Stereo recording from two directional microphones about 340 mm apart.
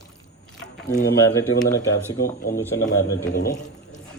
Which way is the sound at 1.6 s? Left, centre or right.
Centre.